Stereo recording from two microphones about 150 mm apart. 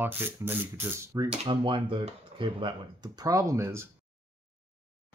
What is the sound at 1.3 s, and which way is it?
Speech, 35° right (ahead or behind).